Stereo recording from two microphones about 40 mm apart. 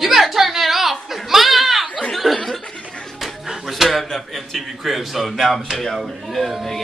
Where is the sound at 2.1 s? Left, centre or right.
Centre.